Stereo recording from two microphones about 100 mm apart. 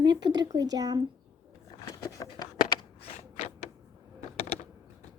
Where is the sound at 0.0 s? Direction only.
45° right (ahead or behind).